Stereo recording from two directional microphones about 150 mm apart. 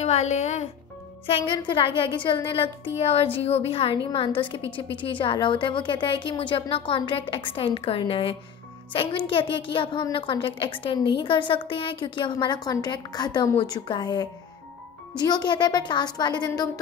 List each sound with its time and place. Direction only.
0.0 s speech: 50° left (ahead or behind)
1.2 s speech: 35° left (ahead or behind)